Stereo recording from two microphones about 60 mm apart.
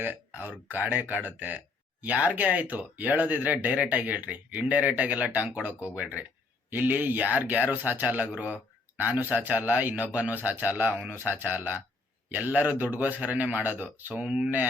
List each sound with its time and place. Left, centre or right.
0.7 s speech: right; by 14.5 s centre